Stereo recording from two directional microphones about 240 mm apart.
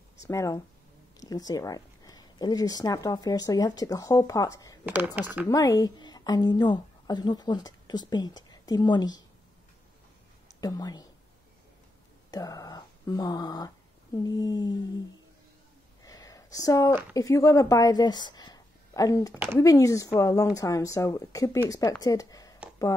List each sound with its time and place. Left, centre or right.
0.2 s a woman's voice: centre
4.8 s speech: centre
5.5 s a woman's voice: centre
10.6 s a woman's voice: centre
12.3 s a woman's voice: centre
16.0 s a sound: centre
17.1 s a woman's voice: centre